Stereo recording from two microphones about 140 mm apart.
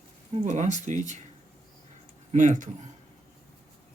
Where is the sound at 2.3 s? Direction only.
60° right (ahead or behind).